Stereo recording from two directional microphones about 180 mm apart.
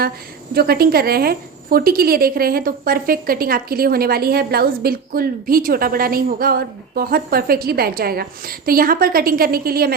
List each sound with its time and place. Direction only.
0.5 s a woman's voice: 60° right (ahead or behind)